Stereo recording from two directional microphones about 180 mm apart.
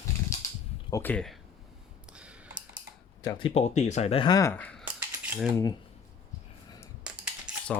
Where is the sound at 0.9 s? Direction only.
15° left (ahead or behind).